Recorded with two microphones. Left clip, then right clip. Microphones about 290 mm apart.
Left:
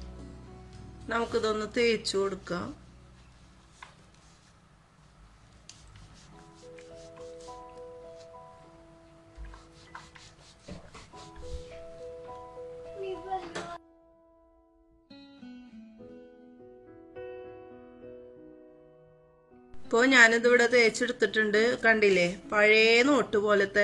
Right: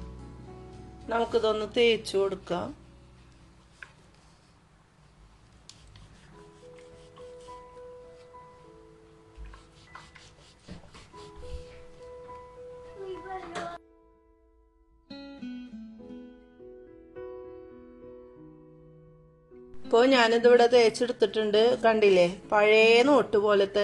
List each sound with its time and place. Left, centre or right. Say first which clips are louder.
0.9 s speech: right 3 dB; centre
15.0 s music: right 8 dB; centre
19.8 s speech: left 1 dB; centre